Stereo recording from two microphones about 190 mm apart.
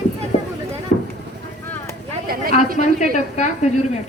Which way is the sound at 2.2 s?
50° right (ahead or behind).